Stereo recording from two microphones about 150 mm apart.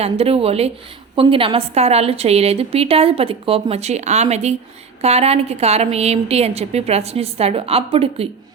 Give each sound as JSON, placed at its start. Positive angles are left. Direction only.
{"t": 0.0, "sound": "a woman's voice", "side_deg": -40}